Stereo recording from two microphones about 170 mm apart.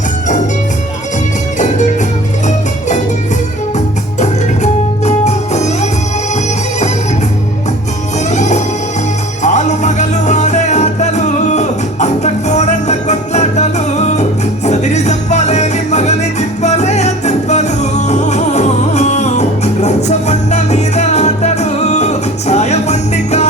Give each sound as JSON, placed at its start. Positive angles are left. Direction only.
{"t": 1.5, "sound": "music", "side_deg": 45}
{"t": 4.2, "sound": "music", "side_deg": 40}
{"t": 8.3, "sound": "music", "side_deg": 45}